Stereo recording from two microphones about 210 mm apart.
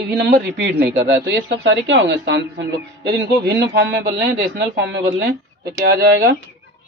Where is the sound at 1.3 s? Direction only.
60° right (ahead or behind).